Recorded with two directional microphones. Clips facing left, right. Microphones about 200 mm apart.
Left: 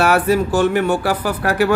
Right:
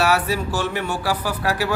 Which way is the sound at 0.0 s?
50° left (ahead or behind).